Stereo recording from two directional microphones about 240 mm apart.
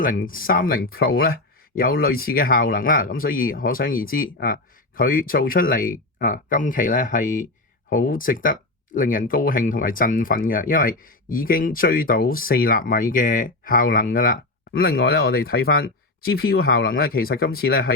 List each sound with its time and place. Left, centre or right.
0.0 s speech: left